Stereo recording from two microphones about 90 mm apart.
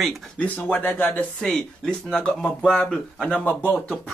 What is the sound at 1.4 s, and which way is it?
Speech, 5° left (ahead or behind).